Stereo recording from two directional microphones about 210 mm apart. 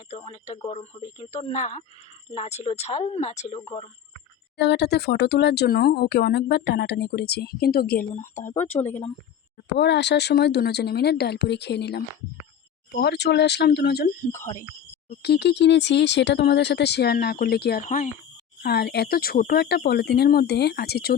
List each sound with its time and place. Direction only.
0.1 s speech: 30° left (ahead or behind)
4.5 s speech: 50° left (ahead or behind)
8.4 s speech: 35° left (ahead or behind)
9.6 s speech: 55° left (ahead or behind)
14.3 s speech: 10° left (ahead or behind)
15.1 s speech: 50° left (ahead or behind)
18.6 s speech: 50° left (ahead or behind)